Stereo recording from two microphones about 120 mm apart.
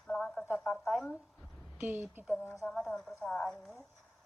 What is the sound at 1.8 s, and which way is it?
Speech, 15° right (ahead or behind).